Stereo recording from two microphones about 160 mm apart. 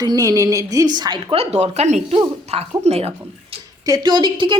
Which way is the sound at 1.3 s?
40° right (ahead or behind).